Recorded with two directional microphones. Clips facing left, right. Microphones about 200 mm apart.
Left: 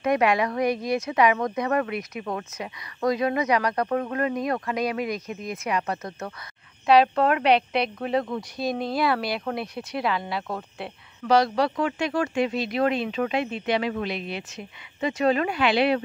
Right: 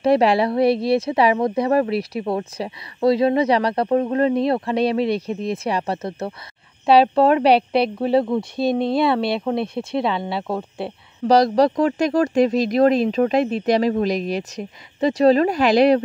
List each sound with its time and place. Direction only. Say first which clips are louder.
0.0 s speech: right 6 dB; 30° right (ahead or behind)